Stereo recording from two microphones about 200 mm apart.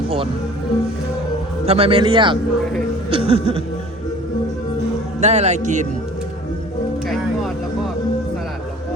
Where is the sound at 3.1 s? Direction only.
30° right (ahead or behind).